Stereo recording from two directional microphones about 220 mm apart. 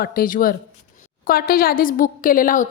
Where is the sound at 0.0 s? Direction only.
40° left (ahead or behind).